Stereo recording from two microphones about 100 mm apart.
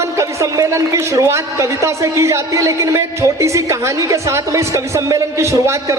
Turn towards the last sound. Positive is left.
turn(degrees=-30)  # may be behind; listen again after turning